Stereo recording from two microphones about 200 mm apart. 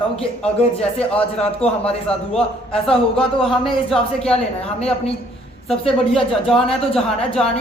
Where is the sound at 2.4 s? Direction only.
5° left (ahead or behind).